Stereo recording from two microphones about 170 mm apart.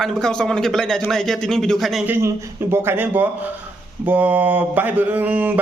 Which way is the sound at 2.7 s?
10° right (ahead or behind).